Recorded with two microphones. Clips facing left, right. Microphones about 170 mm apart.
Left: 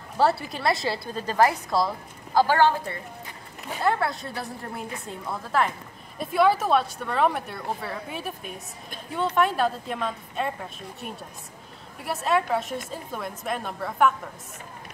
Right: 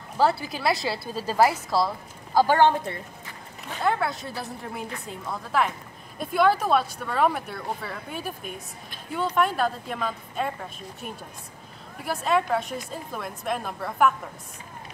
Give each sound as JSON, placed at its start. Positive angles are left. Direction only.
{"t": 0.2, "sound": "speech", "side_deg": 0}
{"t": 2.3, "sound": "a woman's voice", "side_deg": -15}
{"t": 3.8, "sound": "speech", "side_deg": 0}